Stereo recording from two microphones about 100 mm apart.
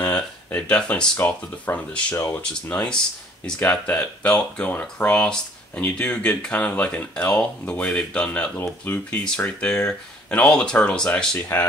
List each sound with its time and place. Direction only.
0.1 s speech: 15° left (ahead or behind)
9.2 s speech: 10° left (ahead or behind)
11.5 s speech: 25° left (ahead or behind)